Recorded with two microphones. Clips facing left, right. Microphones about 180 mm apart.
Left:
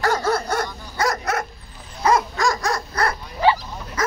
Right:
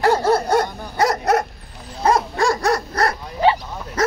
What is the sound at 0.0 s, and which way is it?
Dog, 30° right (ahead or behind).